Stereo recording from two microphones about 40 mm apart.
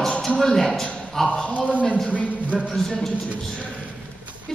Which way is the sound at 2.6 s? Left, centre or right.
Centre.